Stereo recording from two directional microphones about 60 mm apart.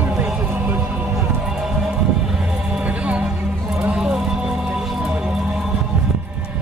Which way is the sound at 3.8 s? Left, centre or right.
Centre.